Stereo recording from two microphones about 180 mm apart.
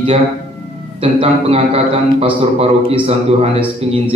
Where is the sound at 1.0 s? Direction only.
35° right (ahead or behind).